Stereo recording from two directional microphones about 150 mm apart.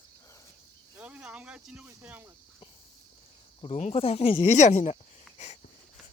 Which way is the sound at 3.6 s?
45° left (ahead or behind).